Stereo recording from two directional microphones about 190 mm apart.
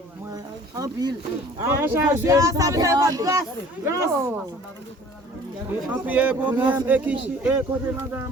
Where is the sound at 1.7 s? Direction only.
10° right (ahead or behind).